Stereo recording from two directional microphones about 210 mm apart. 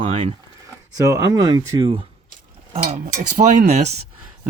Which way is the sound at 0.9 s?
15° right (ahead or behind).